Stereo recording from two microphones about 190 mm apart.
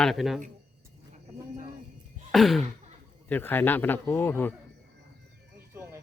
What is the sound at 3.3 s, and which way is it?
Speech, 10° left (ahead or behind).